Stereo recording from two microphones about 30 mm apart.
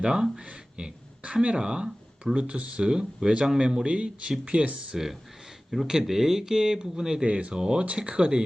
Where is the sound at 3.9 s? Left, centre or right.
Right.